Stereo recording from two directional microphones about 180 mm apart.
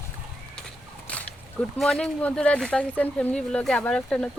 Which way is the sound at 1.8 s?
5° left (ahead or behind).